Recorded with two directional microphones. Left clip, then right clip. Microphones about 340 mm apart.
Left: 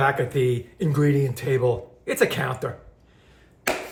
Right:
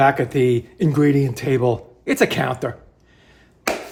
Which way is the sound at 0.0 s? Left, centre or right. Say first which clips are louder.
Right 5 dB; right.